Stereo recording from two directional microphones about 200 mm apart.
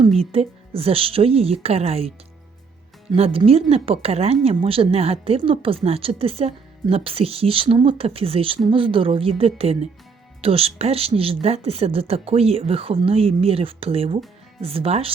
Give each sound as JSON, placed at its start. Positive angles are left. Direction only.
{"t": 0.2, "sound": "a woman's voice", "side_deg": -30}